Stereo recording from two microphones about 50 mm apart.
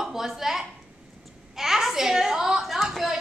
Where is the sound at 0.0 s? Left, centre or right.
Centre.